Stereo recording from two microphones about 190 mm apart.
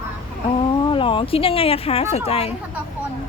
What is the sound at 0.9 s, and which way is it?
Speech, 25° left (ahead or behind).